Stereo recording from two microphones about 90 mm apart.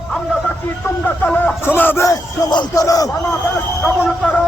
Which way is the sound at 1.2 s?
20° left (ahead or behind).